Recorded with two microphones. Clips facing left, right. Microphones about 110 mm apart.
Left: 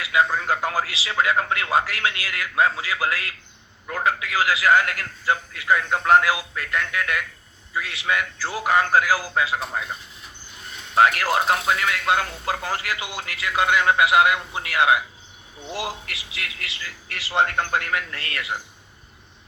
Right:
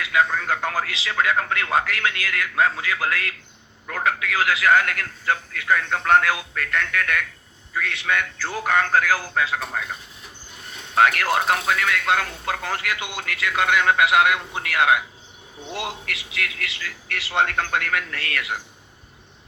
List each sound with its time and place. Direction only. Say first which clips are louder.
0.0 s a man's voice: even; 5° left (ahead or behind)
10.9 s a man's voice: even; 5° left (ahead or behind)
16.4 s speech: right 5 dB; 60° right (ahead or behind)
17.2 s a man's voice: left 1 dB; centre (ahead or behind)
18.1 s a man's voice: right 3 dB; 65° right (ahead or behind)